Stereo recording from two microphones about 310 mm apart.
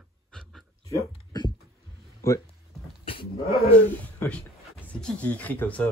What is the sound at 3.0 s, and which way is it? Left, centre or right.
Cat, centre.